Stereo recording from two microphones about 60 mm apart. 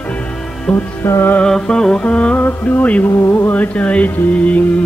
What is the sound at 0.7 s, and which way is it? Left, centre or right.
Music, left.